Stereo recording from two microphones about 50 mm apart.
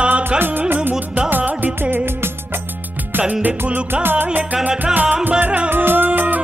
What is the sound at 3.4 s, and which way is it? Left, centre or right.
Music, right.